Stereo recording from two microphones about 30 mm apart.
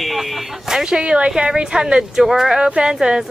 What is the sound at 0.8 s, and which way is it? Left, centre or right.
Speech, right.